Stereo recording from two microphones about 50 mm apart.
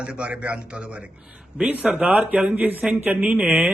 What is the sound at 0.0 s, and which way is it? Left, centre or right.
A man's voice, right.